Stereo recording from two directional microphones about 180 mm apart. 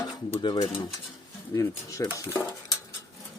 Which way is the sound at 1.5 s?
15° left (ahead or behind).